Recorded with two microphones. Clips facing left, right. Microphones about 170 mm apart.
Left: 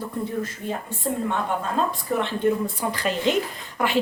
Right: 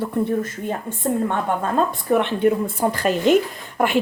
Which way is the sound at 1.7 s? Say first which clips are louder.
Right 7 dB; 65° right (ahead or behind).